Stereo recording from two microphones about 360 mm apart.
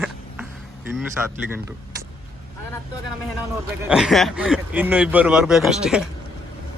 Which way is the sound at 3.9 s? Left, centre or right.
Centre.